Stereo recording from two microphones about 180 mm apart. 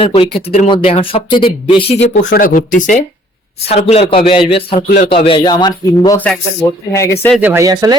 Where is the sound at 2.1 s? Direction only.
45° left (ahead or behind).